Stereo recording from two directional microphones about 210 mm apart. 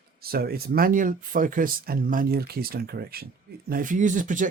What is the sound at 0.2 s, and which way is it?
Speech, 45° right (ahead or behind).